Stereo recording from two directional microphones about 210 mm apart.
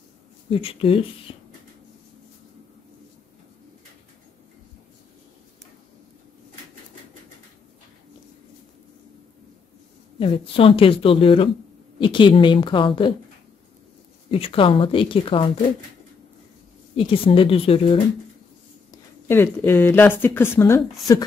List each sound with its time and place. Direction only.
0.5 s speech: 25° left (ahead or behind)
10.1 s speech: 25° left (ahead or behind)
14.3 s speech: 25° left (ahead or behind)
16.9 s speech: 25° left (ahead or behind)
18.9 s speech: 10° left (ahead or behind)